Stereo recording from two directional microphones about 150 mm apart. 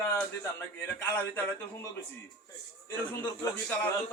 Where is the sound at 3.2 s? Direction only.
10° left (ahead or behind).